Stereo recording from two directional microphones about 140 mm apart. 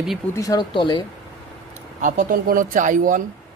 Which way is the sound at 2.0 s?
70° right (ahead or behind).